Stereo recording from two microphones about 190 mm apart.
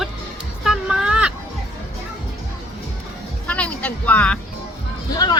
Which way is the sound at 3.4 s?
5° left (ahead or behind).